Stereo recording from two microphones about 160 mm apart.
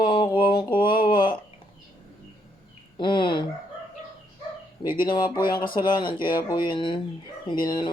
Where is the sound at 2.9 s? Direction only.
30° left (ahead or behind).